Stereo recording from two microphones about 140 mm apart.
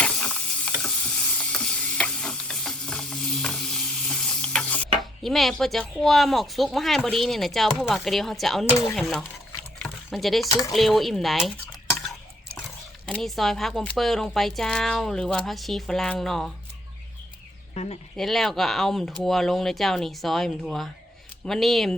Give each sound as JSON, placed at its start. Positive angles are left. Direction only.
{"t": 0.0, "sound": "mechanisms", "side_deg": 5}
{"t": 0.8, "sound": "stir", "side_deg": 10}
{"t": 5.2, "sound": "speech", "side_deg": 0}
{"t": 9.8, "sound": "a sound", "side_deg": 0}
{"t": 10.7, "sound": "speech", "side_deg": 0}
{"t": 13.1, "sound": "speech", "side_deg": 5}
{"t": 17.8, "sound": "speech", "side_deg": 50}
{"t": 18.2, "sound": "speech", "side_deg": 0}